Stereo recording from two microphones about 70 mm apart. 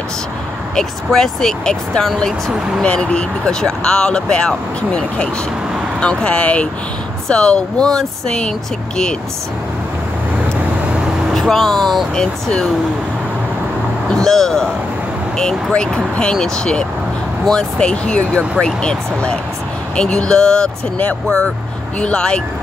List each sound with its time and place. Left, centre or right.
0.7 s speech: centre
11.3 s speech: centre
14.1 s speech: centre
15.7 s speech: centre